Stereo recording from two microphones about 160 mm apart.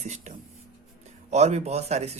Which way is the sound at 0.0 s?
45° right (ahead or behind).